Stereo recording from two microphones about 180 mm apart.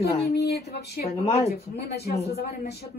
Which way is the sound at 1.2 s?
35° left (ahead or behind).